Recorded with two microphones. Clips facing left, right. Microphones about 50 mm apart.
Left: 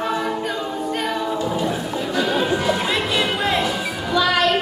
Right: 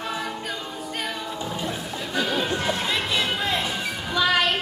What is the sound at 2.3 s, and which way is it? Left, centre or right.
Chatter, centre.